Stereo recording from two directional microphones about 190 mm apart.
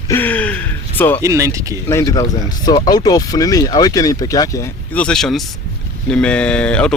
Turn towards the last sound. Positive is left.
turn(degrees=5)  # may be behind; listen again after turning